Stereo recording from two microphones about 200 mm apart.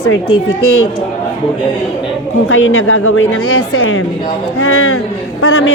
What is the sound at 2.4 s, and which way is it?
Speech, 90° left.